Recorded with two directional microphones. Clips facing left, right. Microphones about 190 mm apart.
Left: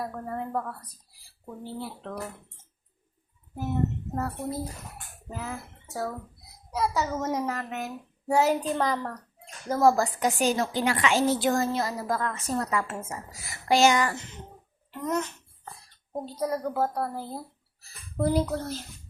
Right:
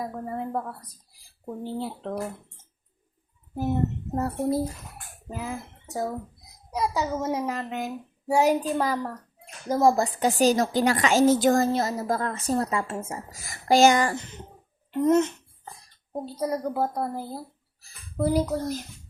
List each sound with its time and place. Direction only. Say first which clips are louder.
0.0 s a woman's voice: right 2 dB; 15° right (ahead or behind)
1.5 s a woman's voice: right 5 dB; 25° right (ahead or behind)
3.5 s speech: right 5 dB; 35° right (ahead or behind)
4.1 s a woman's voice: right 6 dB; 25° right (ahead or behind)
5.3 s a woman's voice: right 3 dB; 10° right (ahead or behind); by 11.9 s 35° right (ahead or behind)
11.9 s a woman's voice: right 2 dB; 25° right (ahead or behind)
13.5 s a woman's voice: right 3 dB; 40° right (ahead or behind)
15.0 s a woman's voice: right 9 dB; 25° right (ahead or behind)
16.2 s a woman's voice: right 1 dB; 10° right (ahead or behind)
17.3 s speech: right 1 dB; 5° right (ahead or behind)